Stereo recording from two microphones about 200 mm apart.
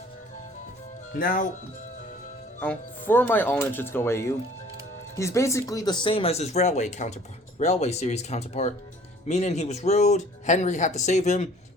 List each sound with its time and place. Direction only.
1.1 s speech: 45° left (ahead or behind)
2.6 s speech: 10° left (ahead or behind); by 11.4 s 35° left (ahead or behind)